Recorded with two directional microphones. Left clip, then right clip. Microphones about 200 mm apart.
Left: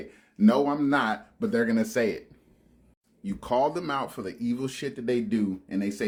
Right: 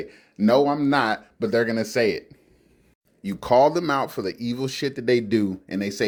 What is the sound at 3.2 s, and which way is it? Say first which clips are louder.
Speech: right 8 dB; 30° right (ahead or behind).